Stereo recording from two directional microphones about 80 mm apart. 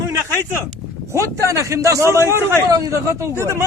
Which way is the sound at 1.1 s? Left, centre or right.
Right.